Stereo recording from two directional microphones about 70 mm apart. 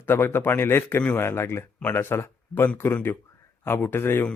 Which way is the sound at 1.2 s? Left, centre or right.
Left.